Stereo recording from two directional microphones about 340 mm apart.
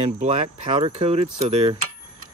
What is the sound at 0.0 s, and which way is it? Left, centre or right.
Speech, centre.